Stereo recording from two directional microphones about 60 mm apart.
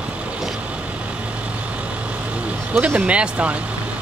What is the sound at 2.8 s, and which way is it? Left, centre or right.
Speech, right.